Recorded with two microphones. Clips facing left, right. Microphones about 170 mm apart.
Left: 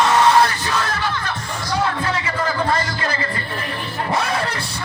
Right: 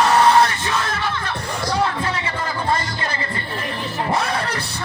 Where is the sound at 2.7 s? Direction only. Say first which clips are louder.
Left 2 dB; 25° right (ahead or behind).